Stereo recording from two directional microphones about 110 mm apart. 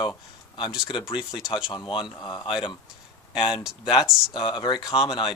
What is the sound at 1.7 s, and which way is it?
Speech, 45° left (ahead or behind).